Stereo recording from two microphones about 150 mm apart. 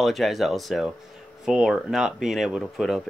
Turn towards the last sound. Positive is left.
turn(degrees=0)  # may be behind; listen again after turning